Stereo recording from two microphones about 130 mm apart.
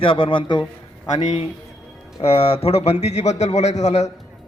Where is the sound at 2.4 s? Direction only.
45° left (ahead or behind).